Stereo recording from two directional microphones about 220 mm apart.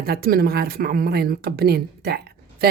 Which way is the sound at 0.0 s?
45° right (ahead or behind).